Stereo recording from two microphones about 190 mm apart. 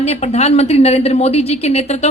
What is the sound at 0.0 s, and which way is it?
A woman's voice, 35° left (ahead or behind).